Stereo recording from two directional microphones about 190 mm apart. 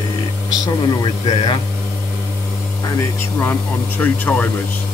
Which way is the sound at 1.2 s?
25° left (ahead or behind).